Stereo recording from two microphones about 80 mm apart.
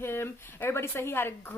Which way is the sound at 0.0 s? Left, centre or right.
Left.